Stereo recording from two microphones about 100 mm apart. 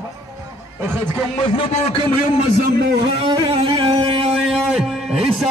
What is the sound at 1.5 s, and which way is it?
Speech, 70° left (ahead or behind).